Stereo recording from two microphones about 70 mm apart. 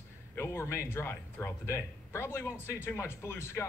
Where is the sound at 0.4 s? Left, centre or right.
Left.